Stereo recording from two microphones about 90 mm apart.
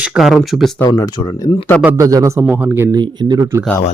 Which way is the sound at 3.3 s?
35° right (ahead or behind).